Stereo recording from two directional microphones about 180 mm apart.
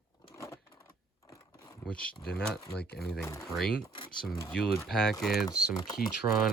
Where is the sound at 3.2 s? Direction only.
15° left (ahead or behind).